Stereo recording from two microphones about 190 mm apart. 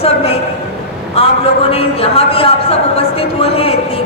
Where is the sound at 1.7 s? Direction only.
30° left (ahead or behind).